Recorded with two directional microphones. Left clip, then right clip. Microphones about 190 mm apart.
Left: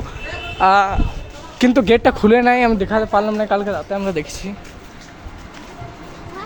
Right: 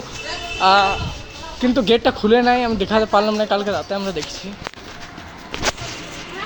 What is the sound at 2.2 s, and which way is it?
Speech, 25° left (ahead or behind).